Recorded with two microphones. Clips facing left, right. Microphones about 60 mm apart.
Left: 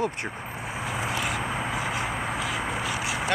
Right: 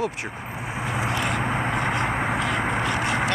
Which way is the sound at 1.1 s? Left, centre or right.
Centre.